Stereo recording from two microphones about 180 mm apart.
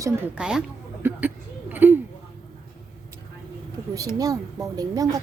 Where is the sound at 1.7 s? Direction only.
10° right (ahead or behind).